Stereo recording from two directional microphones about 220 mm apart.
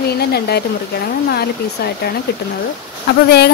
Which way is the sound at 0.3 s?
45° left (ahead or behind).